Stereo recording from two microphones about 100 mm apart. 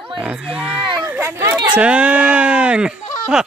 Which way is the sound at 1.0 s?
20° right (ahead or behind).